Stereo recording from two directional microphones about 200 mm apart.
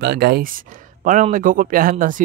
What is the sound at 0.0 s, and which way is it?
Speech, 55° right (ahead or behind).